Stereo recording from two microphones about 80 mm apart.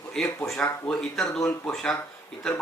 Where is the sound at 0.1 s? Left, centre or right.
Centre.